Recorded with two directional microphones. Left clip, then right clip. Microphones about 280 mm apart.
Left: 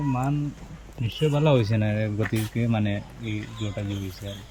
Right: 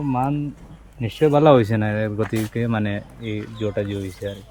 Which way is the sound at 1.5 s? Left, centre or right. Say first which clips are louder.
Right 8 dB; centre.